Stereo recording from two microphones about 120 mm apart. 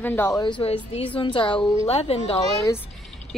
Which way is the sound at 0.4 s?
40° left (ahead or behind).